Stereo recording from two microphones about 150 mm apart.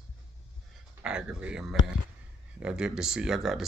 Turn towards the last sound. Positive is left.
turn(degrees=0)  # may be behind; listen again after turning